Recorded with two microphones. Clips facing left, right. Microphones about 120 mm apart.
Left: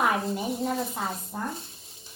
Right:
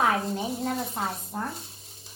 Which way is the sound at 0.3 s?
Centre (ahead or behind).